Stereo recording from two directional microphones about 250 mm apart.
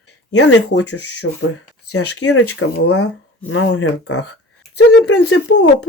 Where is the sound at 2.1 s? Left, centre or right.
Left.